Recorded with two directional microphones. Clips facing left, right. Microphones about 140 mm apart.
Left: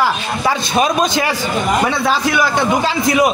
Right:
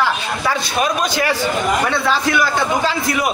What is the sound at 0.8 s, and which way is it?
Speech, 25° left (ahead or behind).